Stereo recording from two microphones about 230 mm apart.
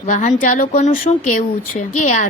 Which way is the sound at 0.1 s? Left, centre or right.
Left.